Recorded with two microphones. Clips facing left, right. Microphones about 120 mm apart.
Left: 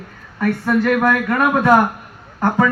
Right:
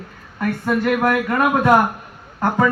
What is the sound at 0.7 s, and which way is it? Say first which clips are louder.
A man's voice: left 2 dB; 15° right (ahead or behind).